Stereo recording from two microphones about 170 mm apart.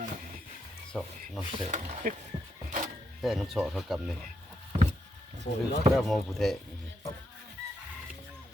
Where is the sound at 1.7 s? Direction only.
45° right (ahead or behind).